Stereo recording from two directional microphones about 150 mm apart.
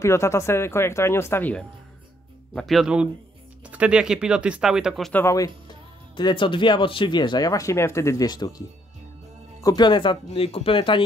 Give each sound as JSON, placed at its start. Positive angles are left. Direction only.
{"t": 0.0, "sound": "speech", "side_deg": 20}
{"t": 5.1, "sound": "speech", "side_deg": 20}
{"t": 6.1, "sound": "speech", "side_deg": 30}